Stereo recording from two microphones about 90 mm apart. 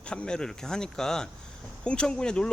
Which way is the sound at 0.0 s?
10° left (ahead or behind).